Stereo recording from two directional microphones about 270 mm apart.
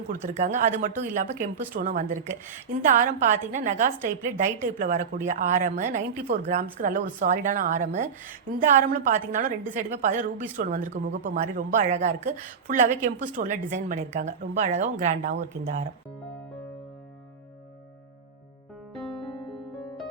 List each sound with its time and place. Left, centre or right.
0.1 s speech: right